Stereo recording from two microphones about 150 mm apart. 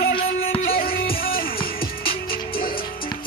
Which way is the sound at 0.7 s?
80° left.